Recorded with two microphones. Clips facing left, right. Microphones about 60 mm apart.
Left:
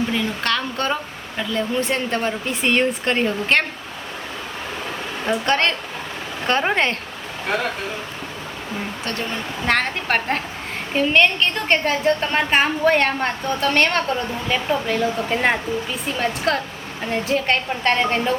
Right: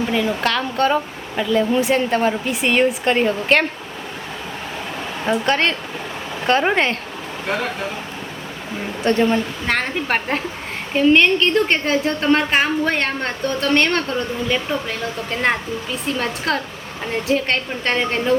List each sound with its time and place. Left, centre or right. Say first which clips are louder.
0.1 s a woman's voice: right 3 dB; centre
5.2 s a woman's voice: right 1 dB; centre
9.0 s speech: right 13 dB; right
9.6 s a woman's voice: left 4 dB; centre